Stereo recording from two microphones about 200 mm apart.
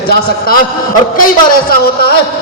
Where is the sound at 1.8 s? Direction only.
50° left (ahead or behind).